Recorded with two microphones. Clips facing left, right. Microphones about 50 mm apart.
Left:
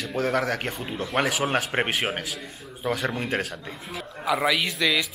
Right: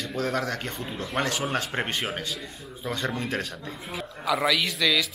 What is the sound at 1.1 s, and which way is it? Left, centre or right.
Speech, centre.